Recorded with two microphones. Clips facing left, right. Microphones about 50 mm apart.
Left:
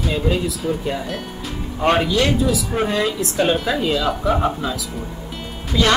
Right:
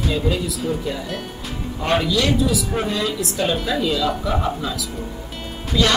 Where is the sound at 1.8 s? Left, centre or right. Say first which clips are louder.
Left 2 dB; left.